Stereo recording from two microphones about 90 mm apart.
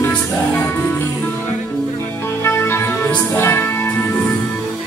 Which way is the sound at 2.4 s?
30° left (ahead or behind).